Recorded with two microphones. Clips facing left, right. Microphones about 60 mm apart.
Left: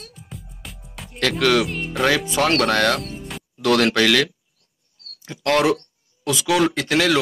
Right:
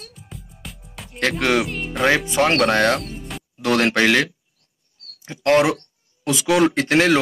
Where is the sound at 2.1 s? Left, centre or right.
Right.